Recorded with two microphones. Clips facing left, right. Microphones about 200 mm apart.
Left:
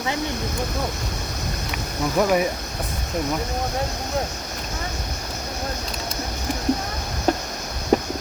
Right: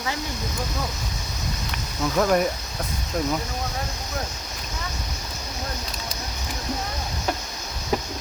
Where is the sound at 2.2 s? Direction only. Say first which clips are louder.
Left 1 dB; 5° left (ahead or behind).